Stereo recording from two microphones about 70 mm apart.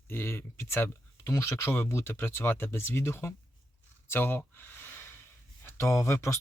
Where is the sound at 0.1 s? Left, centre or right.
Left.